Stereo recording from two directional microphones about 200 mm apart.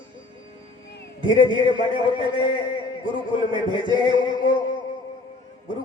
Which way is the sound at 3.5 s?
25° right (ahead or behind).